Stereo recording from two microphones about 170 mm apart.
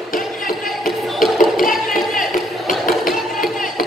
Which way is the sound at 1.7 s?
Centre (ahead or behind).